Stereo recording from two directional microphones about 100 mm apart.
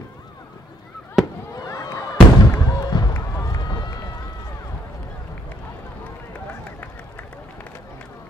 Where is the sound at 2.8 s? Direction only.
45° left (ahead or behind).